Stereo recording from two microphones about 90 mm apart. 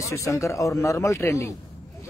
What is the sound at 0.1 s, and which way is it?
A man's voice, 35° left (ahead or behind).